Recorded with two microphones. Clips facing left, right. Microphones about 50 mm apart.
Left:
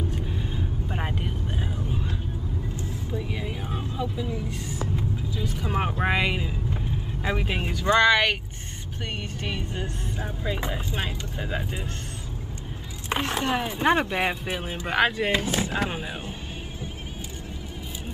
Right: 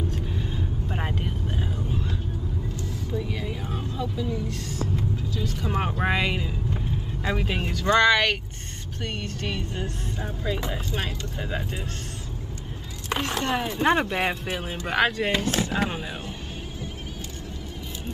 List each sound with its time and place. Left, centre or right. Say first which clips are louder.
0.1 s vehicle: even; centre
3.1 s vehicle: right 2 dB; centre
9.0 s speech: right 1 dB; centre
13.2 s speech: even; centre
15.3 s speech: even; centre